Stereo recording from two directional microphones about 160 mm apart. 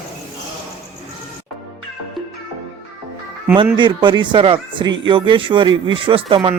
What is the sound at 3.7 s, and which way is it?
Speech, 30° right (ahead or behind).